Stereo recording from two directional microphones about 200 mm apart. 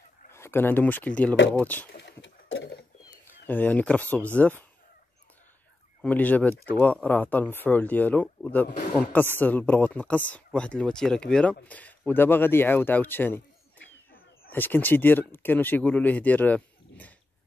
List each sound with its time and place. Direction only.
0.3 s speech: 10° left (ahead or behind)
1.9 s a sound: 60° left (ahead or behind)
3.4 s speech: 10° left (ahead or behind)
6.0 s speech: 10° left (ahead or behind)
14.5 s speech: 10° left (ahead or behind)